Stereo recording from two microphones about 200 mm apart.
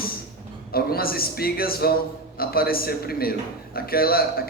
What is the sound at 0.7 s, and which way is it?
Speech, 50° left (ahead or behind).